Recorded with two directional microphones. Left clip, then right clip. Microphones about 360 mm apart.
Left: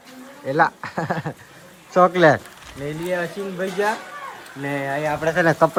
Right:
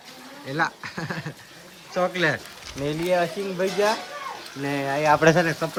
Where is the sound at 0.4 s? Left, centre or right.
Centre.